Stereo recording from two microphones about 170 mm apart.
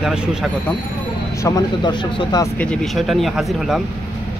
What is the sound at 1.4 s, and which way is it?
Speech, 25° left (ahead or behind).